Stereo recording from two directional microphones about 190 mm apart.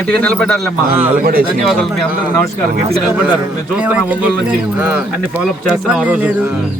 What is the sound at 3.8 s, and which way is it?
Speech, 5° right (ahead or behind).